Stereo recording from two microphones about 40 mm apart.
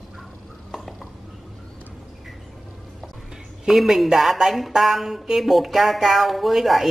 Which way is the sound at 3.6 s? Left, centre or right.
Centre.